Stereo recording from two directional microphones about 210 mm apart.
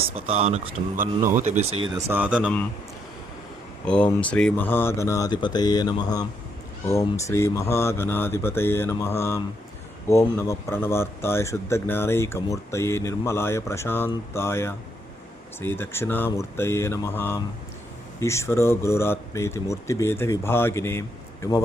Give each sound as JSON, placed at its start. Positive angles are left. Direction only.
{"t": 0.2, "sound": "speech", "side_deg": -30}
{"t": 1.9, "sound": "speech", "side_deg": -15}
{"t": 3.8, "sound": "speech", "side_deg": 5}